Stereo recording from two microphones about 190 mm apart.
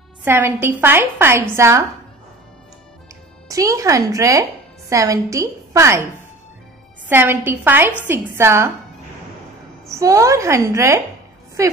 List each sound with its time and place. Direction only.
0.2 s a woman's voice: 10° right (ahead or behind)
3.4 s a woman's voice: 15° right (ahead or behind)
7.1 s a woman's voice: 10° right (ahead or behind)
9.8 s a woman's voice: 15° right (ahead or behind)